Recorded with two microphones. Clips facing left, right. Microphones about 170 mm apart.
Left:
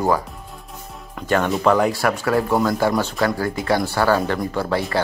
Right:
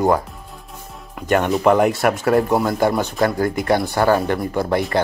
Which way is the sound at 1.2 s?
15° right (ahead or behind).